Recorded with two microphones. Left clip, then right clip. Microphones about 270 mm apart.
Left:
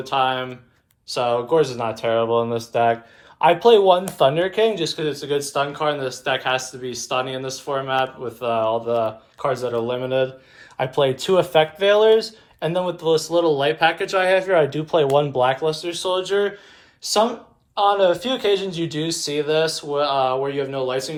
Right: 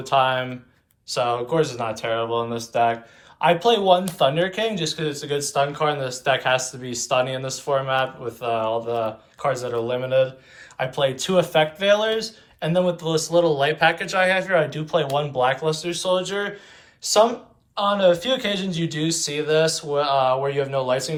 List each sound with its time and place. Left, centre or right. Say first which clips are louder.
0.0 s speech: right 1 dB; centre